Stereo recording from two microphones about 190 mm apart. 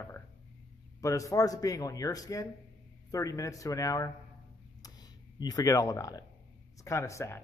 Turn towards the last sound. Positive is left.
turn(degrees=15)  # may be behind; listen again after turning